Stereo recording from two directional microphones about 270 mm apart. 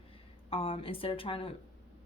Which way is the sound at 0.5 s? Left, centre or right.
Centre.